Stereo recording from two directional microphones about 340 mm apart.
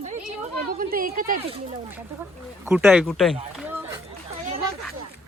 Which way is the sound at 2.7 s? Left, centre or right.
Centre.